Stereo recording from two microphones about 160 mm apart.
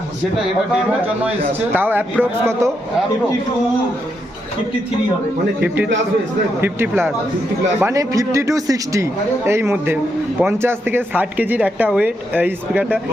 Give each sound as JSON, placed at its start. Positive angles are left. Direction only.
{"t": 0.7, "sound": "speech", "side_deg": -10}
{"t": 5.6, "sound": "speech", "side_deg": -10}